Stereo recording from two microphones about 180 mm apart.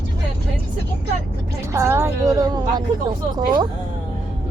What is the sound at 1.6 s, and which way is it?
A woman's voice, 15° right (ahead or behind).